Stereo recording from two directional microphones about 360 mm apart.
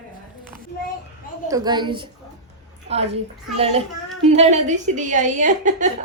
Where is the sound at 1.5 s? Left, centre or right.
Centre.